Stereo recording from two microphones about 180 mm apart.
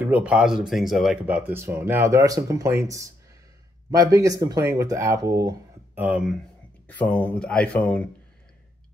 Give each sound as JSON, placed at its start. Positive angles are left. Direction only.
{"t": 0.0, "sound": "speech", "side_deg": -10}
{"t": 6.9, "sound": "speech", "side_deg": 10}